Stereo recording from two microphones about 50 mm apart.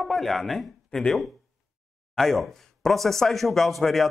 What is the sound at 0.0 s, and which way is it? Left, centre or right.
Speech, centre.